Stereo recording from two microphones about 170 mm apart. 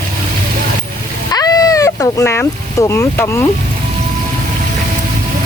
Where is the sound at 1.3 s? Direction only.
20° left (ahead or behind).